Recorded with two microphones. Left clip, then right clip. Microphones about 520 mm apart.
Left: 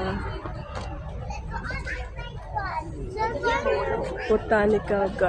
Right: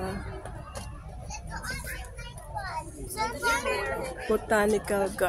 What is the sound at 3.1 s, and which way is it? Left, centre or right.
Vehicle, right.